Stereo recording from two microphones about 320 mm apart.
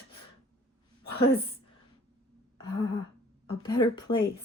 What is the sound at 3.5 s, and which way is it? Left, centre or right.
Speech, centre.